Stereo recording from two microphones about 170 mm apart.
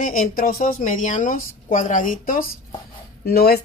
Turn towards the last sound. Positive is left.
turn(degrees=65)  # may be behind; listen again after turning